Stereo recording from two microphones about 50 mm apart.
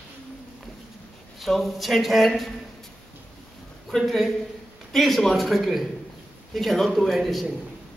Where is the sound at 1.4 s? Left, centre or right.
Centre.